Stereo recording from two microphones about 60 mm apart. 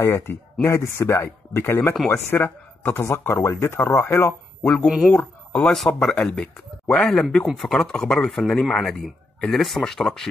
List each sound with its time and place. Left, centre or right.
0.0 s speech: left
4.3 s speech: centre
4.8 s speech: centre
5.1 s speech: centre